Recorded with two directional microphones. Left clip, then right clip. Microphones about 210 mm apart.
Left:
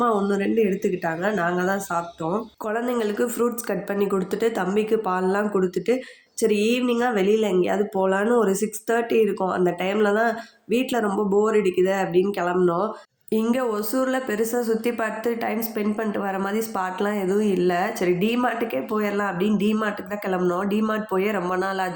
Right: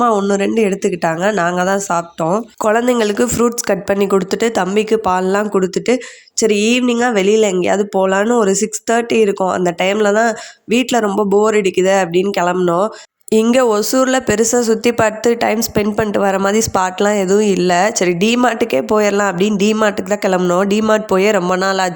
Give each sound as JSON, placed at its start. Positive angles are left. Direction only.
{"t": 0.0, "sound": "speech", "side_deg": -35}